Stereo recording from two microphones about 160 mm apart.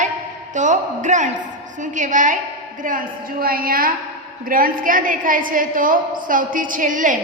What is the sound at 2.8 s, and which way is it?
A woman's voice, 65° right (ahead or behind).